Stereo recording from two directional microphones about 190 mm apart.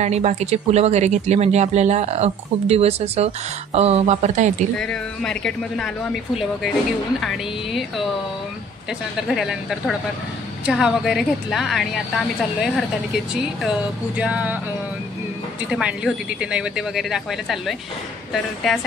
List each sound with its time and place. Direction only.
0.0 s speech: 35° right (ahead or behind)
4.7 s speech: 5° left (ahead or behind)
7.2 s speech: centre (ahead or behind)
9.3 s speech: centre (ahead or behind)
15.7 s speech: 5° right (ahead or behind)